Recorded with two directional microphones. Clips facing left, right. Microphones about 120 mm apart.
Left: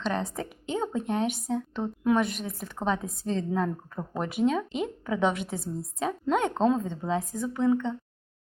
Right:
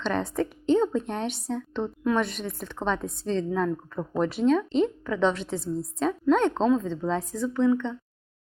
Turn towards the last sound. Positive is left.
turn(degrees=5)  # may be behind; listen again after turning